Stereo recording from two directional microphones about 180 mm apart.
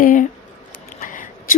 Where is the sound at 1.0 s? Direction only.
45° left (ahead or behind).